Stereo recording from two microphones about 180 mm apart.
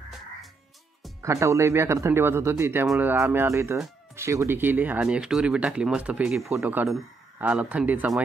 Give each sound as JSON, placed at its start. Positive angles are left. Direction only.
{"t": 1.2, "sound": "speech", "side_deg": -15}